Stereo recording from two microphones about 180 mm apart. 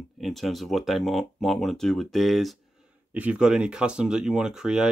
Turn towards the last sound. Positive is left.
turn(degrees=-5)  # may be behind; listen again after turning